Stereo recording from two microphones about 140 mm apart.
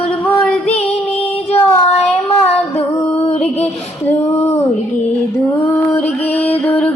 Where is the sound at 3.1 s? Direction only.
50° left (ahead or behind).